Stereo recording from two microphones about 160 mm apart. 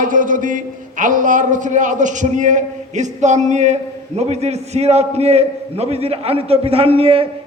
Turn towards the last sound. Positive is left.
turn(degrees=-35)  # may be behind; listen again after turning